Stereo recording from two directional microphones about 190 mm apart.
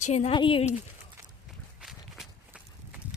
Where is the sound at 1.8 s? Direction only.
Centre (ahead or behind).